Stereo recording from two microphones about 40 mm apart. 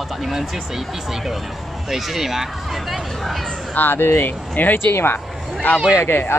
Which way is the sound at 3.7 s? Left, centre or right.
Left.